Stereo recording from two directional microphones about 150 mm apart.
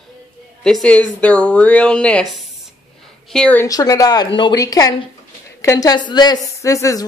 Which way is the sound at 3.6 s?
25° left (ahead or behind).